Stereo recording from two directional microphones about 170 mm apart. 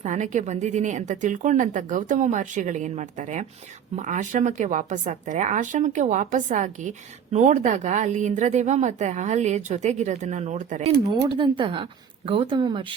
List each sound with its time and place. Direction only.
0.0 s a woman's voice: 45° right (ahead or behind)
11.0 s speech: 25° right (ahead or behind)